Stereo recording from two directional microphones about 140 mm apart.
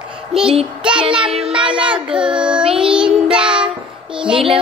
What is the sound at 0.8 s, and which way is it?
Child singing, 5° right (ahead or behind).